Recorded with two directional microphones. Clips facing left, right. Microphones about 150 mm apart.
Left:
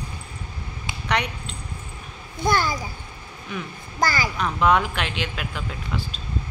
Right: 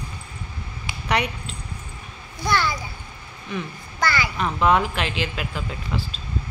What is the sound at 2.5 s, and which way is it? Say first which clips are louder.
Speech: even; 45° left (ahead or behind).